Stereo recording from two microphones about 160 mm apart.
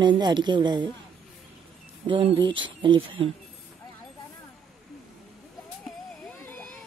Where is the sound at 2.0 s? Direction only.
35° right (ahead or behind).